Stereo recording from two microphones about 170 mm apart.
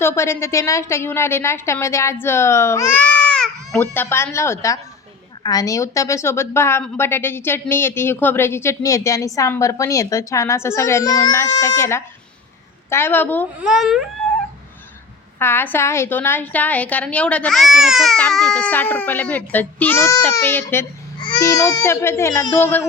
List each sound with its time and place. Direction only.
0.0 s a woman's voice: 15° left (ahead or behind)
13.6 s a child's voice: 5° right (ahead or behind)
15.4 s a woman's voice: 10° left (ahead or behind)
21.2 s a woman's voice: 25° left (ahead or behind)